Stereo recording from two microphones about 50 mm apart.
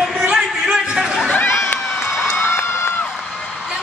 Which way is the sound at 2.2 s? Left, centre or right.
Left.